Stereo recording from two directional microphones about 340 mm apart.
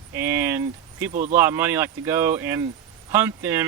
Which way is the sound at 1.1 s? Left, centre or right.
Right.